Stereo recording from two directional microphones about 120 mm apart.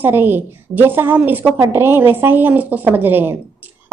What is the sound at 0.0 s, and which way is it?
A woman's voice, 15° right (ahead or behind).